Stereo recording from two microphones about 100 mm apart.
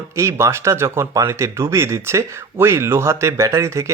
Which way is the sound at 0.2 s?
30° right (ahead or behind).